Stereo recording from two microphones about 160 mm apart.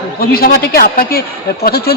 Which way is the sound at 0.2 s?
70° left (ahead or behind).